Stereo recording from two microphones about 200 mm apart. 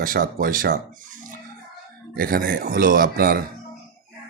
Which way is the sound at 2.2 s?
45° right (ahead or behind).